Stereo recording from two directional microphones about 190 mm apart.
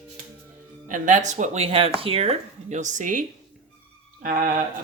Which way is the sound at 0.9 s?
40° right (ahead or behind).